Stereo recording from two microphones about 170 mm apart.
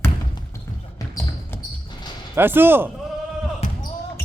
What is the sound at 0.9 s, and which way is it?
Basketball bounce, 20° left (ahead or behind).